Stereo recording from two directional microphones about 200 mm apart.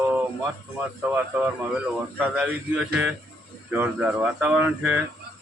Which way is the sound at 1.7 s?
5° right (ahead or behind).